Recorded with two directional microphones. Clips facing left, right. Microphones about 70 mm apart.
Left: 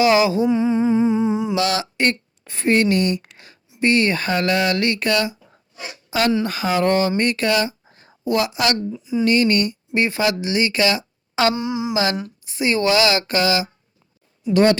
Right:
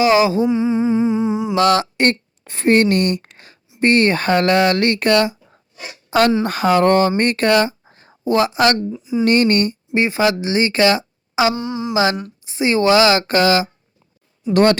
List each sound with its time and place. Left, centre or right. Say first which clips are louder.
0.0 s speech: right 2 dB; right
0.4 s humming: right 1 dB; centre
1.5 s speech: right 6 dB; right
7.9 s a sound: right 3 dB; right
8.9 s speech: right 2 dB; right
9.2 s speech: right 3 dB; right
9.9 s speech: right 3 dB; right
11.5 s speech: even; centre
12.5 s speech: right 4 dB; right
14.5 s a woman's voice: right 2 dB; right